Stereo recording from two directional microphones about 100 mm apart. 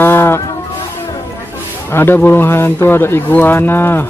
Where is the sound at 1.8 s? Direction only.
20° left (ahead or behind).